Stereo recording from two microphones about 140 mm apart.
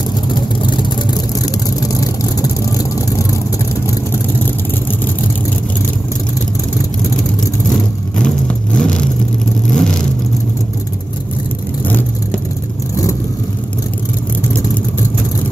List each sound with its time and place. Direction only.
0.3 s vehicle: 35° left (ahead or behind)
8.7 s vehicle: 5° left (ahead or behind)
11.8 s vehicle: 15° left (ahead or behind)